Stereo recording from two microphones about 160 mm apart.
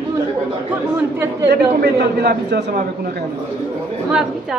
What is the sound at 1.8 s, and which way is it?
A man's voice, 90° right.